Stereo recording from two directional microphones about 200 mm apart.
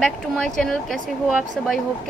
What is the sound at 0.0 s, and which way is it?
A woman's voice, 5° left (ahead or behind).